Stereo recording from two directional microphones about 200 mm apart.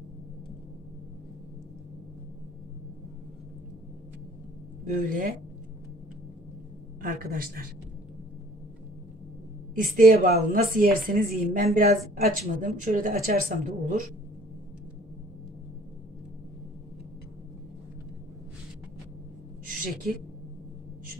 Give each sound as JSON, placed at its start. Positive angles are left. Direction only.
{"t": 4.8, "sound": "a woman's voice", "side_deg": -45}
{"t": 7.0, "sound": "a woman's voice", "side_deg": -45}
{"t": 9.8, "sound": "a woman's voice", "side_deg": -45}
{"t": 19.6, "sound": "a sound", "side_deg": -45}